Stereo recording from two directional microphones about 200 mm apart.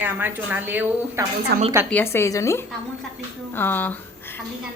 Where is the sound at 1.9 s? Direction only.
10° left (ahead or behind).